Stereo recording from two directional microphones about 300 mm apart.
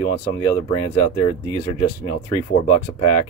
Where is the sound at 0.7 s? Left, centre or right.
Centre.